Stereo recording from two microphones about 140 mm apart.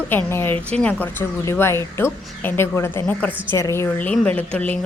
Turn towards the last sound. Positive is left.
turn(degrees=10)  # may be behind; listen again after turning